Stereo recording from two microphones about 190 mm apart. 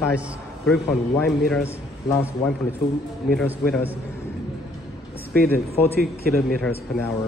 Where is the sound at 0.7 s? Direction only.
5° left (ahead or behind).